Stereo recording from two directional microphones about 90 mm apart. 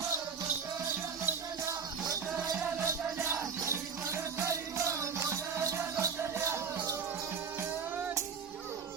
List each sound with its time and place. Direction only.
1.2 s music: 30° right (ahead or behind)